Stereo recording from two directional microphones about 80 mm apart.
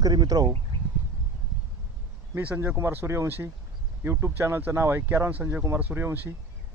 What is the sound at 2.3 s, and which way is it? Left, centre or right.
Speech, right.